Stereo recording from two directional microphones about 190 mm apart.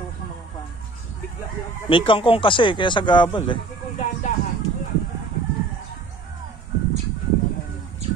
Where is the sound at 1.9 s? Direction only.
25° left (ahead or behind).